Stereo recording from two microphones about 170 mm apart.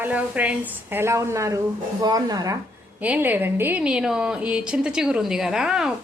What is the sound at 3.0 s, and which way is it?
A woman's voice, 10° right (ahead or behind).